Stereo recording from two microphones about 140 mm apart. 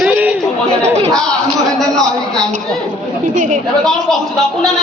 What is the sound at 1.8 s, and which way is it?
Speech, 5° left (ahead or behind).